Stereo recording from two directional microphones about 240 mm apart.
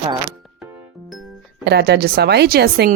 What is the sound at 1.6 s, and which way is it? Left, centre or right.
A woman's voice, right.